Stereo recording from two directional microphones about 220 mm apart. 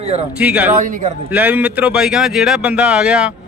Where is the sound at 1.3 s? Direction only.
5° right (ahead or behind).